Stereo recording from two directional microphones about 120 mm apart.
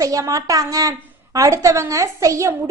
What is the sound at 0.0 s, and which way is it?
A woman's voice, 30° right (ahead or behind).